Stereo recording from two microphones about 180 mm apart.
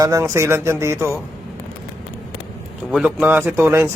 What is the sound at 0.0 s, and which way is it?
Speech, 15° right (ahead or behind).